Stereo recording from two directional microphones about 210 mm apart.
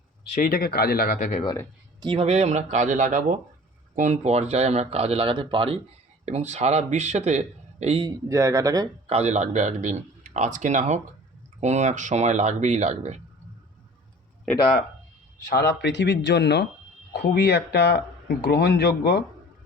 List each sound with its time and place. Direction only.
0.3 s speech: 45° left (ahead or behind)
2.0 s speech: 25° right (ahead or behind)
8.3 s speech: 15° right (ahead or behind)
9.0 s speech: 30° right (ahead or behind)
14.5 s speech: 5° left (ahead or behind)
15.4 s speech: 50° left (ahead or behind)